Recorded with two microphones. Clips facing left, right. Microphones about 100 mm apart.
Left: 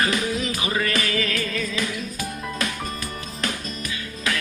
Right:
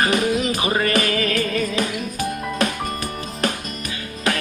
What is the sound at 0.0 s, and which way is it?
Music, 55° right (ahead or behind).